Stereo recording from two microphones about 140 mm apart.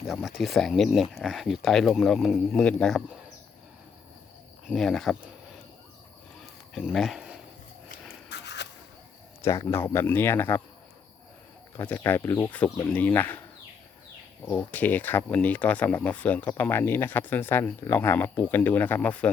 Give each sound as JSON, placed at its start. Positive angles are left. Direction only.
{"t": 0.1, "sound": "speech", "side_deg": -5}
{"t": 4.6, "sound": "speech", "side_deg": 0}
{"t": 6.4, "sound": "a sound", "side_deg": 0}
{"t": 9.4, "sound": "speech", "side_deg": 20}
{"t": 11.8, "sound": "speech", "side_deg": 15}
{"t": 14.4, "sound": "speech", "side_deg": 10}